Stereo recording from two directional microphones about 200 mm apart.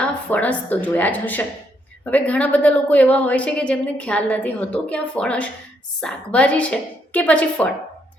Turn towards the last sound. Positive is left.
turn(degrees=5)  # may be behind; listen again after turning